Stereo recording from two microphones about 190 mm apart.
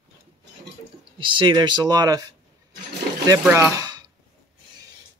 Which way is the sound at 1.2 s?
25° right (ahead or behind).